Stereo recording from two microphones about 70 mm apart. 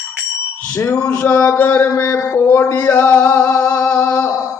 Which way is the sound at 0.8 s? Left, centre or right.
Left.